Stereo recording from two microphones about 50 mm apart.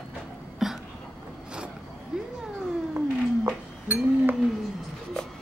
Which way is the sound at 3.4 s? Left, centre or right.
Right.